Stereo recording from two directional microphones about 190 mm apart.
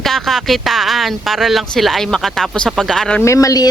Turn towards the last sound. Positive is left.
turn(degrees=20)  # may be behind; listen again after turning